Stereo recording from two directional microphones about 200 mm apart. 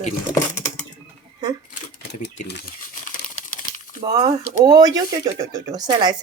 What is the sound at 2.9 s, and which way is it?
Crumpling, 40° left (ahead or behind).